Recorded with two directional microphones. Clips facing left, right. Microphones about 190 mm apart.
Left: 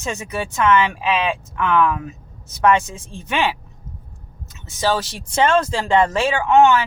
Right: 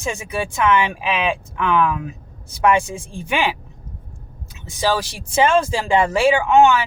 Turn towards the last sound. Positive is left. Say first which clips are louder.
# even
turn(degrees=-10)  # may be behind; listen again after turning